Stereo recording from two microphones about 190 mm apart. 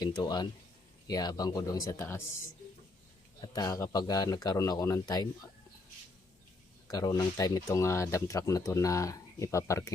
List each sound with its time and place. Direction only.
0.0 s speech: 20° left (ahead or behind)
3.5 s speech: 20° left (ahead or behind)
6.8 s speech: 20° left (ahead or behind)